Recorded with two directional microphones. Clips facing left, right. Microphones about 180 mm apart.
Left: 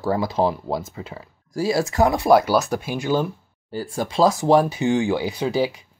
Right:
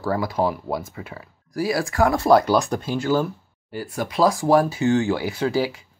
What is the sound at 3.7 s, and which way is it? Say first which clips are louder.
Speech: left 2 dB; 30° left (ahead or behind).